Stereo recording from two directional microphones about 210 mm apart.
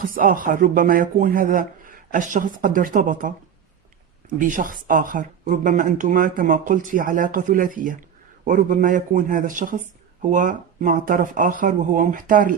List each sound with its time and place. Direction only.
0.0 s speech: 40° right (ahead or behind)
4.4 s speech: 40° right (ahead or behind)